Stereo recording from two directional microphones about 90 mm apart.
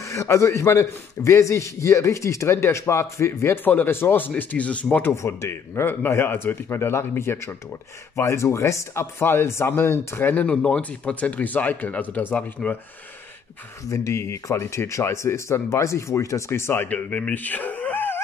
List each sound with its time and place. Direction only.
0.0 s a man's voice: 35° left (ahead or behind); by 5.1 s 20° left (ahead or behind)
5.1 s speech: 35° left (ahead or behind)
10.3 s speech: 15° left (ahead or behind)
13.8 s speech: 35° left (ahead or behind); by 18.2 s 20° left (ahead or behind)